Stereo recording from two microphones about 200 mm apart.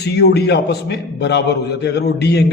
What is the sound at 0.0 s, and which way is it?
A man's voice, 55° left (ahead or behind).